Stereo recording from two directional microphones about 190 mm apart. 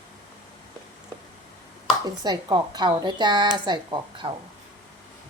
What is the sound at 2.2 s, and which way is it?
A woman's voice, 20° right (ahead or behind).